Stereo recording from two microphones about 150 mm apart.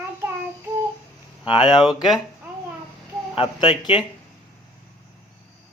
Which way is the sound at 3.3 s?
30° left (ahead or behind).